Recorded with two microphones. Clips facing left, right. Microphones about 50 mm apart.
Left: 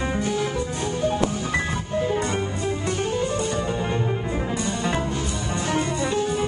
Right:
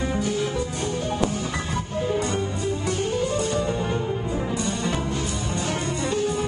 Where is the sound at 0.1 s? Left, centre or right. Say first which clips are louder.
Even; left.